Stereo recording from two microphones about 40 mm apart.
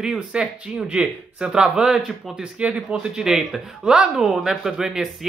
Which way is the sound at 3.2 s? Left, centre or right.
Centre.